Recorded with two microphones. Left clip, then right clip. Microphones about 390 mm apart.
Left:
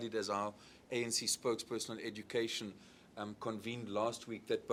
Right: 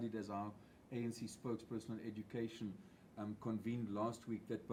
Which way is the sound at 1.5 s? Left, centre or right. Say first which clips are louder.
Left 8 dB; left.